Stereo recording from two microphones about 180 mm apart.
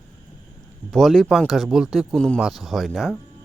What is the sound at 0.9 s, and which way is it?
Speech, centre (ahead or behind).